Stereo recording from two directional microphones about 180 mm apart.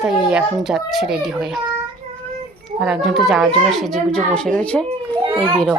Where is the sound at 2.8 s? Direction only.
Centre (ahead or behind).